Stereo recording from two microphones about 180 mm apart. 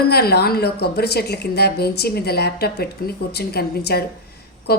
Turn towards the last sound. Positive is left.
turn(degrees=60)  # may be behind; listen again after turning